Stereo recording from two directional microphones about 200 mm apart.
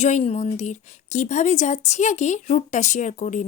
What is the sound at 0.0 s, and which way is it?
Speech, 35° left (ahead or behind).